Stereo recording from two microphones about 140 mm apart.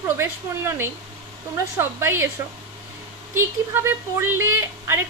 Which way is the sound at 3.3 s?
15° right (ahead or behind).